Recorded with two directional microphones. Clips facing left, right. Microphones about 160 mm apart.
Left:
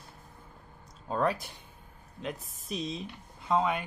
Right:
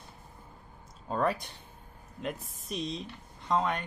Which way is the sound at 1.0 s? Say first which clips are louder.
Even; centre (ahead or behind).